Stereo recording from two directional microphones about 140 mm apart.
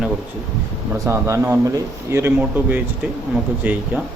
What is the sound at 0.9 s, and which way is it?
A man's voice, 20° right (ahead or behind).